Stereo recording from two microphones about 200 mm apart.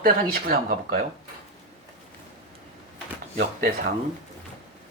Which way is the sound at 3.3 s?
45° right (ahead or behind).